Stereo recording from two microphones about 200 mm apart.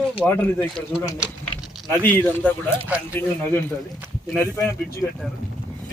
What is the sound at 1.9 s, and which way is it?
Speech, 10° left (ahead or behind).